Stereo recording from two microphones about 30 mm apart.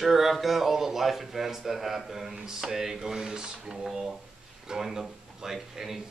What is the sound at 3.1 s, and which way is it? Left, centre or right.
Speech, right.